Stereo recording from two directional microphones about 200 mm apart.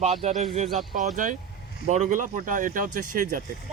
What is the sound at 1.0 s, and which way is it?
Speech, 40° right (ahead or behind).